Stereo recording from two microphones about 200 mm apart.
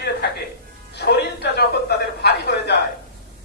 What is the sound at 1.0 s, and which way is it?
Music, 55° left (ahead or behind).